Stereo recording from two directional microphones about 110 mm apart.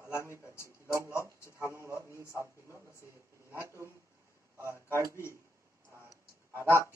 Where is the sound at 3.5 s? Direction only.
25° right (ahead or behind).